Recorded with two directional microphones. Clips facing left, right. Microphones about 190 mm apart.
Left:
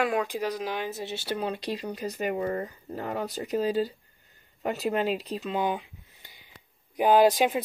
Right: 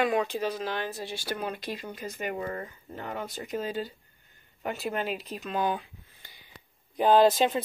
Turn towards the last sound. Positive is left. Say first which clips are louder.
# left 1 dB
turn(degrees=10)  # may be behind; listen again after turning